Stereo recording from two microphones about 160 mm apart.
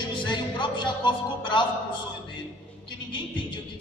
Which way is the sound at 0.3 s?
30° left (ahead or behind).